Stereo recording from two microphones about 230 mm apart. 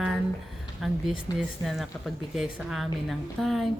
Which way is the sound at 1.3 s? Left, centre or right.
Centre.